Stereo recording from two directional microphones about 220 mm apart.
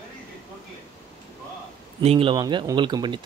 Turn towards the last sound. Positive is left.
turn(degrees=-20)  # may be behind; listen again after turning